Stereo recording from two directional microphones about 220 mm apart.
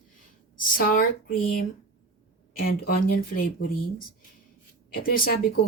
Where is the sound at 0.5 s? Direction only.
40° left (ahead or behind).